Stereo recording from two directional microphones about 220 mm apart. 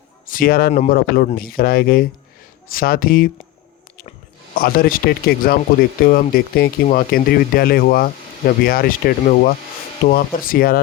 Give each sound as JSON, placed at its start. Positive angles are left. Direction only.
{"t": 0.3, "sound": "speech", "side_deg": 40}
{"t": 4.5, "sound": "speech", "side_deg": 45}